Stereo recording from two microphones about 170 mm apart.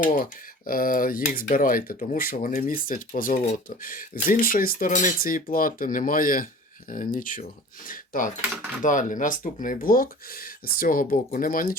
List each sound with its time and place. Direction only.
0.0 s speech: 55° left (ahead or behind)